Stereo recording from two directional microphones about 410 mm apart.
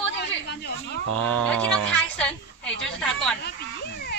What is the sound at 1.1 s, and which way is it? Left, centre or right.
Speech, right.